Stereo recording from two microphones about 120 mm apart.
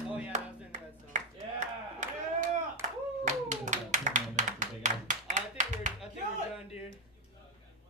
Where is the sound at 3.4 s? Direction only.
85° right.